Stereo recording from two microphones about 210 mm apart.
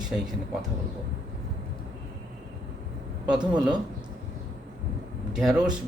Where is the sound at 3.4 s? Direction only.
20° right (ahead or behind).